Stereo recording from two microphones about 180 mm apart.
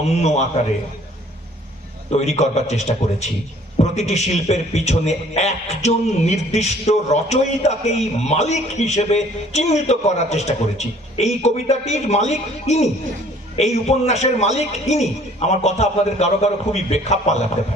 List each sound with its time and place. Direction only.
0.2 s a man's voice: 40° left (ahead or behind)
2.0 s a man's voice: 40° left (ahead or behind)